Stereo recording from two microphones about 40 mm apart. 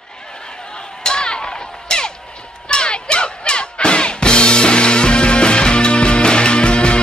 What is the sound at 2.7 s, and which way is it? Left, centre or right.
Music, left.